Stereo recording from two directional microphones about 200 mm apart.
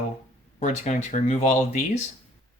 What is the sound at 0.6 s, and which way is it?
Speech, 35° left (ahead or behind).